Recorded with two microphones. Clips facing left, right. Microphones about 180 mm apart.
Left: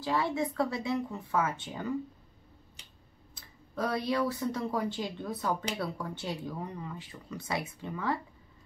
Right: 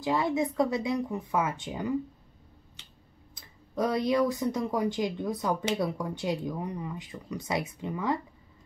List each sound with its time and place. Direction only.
0.0 s speech: 15° right (ahead or behind)
3.3 s speech: 15° right (ahead or behind)